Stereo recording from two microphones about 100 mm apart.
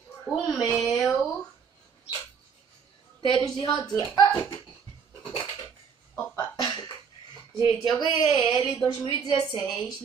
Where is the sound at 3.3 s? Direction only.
50° left (ahead or behind).